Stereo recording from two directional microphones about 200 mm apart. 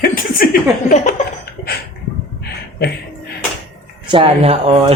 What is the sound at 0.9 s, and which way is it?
Laughter, 35° left (ahead or behind).